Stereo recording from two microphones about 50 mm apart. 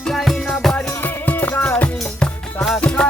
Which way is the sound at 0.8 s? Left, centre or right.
Left.